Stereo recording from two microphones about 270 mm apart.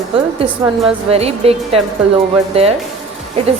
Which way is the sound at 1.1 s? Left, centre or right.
Right.